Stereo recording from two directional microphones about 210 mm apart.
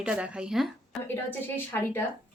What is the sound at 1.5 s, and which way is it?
Speech, 10° left (ahead or behind).